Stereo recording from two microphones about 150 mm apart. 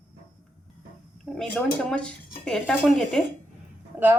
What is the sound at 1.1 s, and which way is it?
Speech, centre (ahead or behind).